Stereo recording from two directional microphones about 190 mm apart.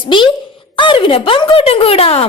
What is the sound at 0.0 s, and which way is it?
Speech, 25° left (ahead or behind).